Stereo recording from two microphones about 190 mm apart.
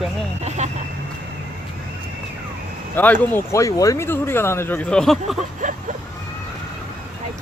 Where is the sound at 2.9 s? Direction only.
10° left (ahead or behind).